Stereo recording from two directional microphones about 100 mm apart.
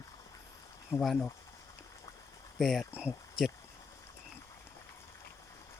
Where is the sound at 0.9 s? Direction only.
30° left (ahead or behind).